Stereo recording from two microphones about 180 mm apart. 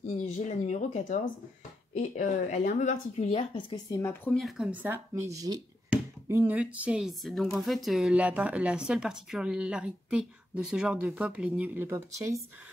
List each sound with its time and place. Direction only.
0.5 s speech: 40° left (ahead or behind); by 4.4 s 10° left (ahead or behind)
4.4 s speech: centre (ahead or behind)
4.8 s speech: 15° right (ahead or behind)